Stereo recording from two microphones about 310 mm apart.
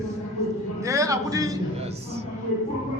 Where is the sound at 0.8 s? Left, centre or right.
Centre.